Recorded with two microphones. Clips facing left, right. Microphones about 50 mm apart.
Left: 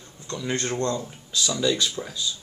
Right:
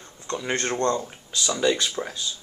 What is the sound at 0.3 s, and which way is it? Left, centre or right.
Speech, right.